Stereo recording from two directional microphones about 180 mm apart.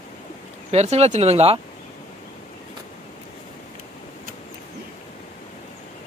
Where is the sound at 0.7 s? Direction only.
35° right (ahead or behind).